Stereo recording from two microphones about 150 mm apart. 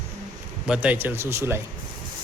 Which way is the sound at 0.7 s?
10° right (ahead or behind).